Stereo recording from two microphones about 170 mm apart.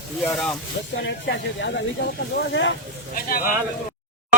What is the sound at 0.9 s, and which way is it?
Speech, 85° left.